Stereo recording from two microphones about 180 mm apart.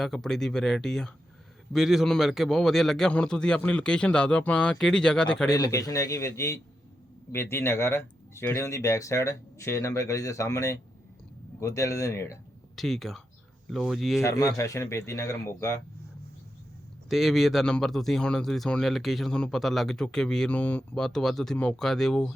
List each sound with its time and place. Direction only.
0.0 s speech: centre (ahead or behind)
5.5 s speech: 20° left (ahead or behind)
12.7 s speech: centre (ahead or behind)
14.2 s speech: 15° left (ahead or behind)
17.1 s speech: centre (ahead or behind)